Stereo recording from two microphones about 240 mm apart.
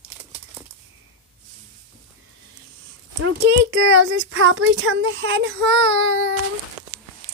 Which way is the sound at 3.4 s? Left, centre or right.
Right.